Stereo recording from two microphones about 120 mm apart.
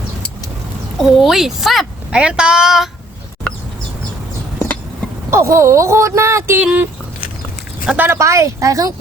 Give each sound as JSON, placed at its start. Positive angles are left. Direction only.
{"t": 0.9, "sound": "speech", "side_deg": 0}
{"t": 5.3, "sound": "speech", "side_deg": -25}
{"t": 6.6, "sound": "speech", "side_deg": -10}
{"t": 7.9, "sound": "speech", "side_deg": -20}